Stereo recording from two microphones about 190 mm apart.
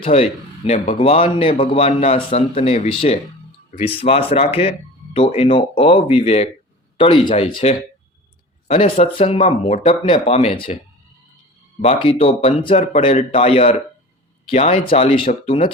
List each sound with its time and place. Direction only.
0.0 s speech: 30° left (ahead or behind)
11.8 s speech: 30° left (ahead or behind)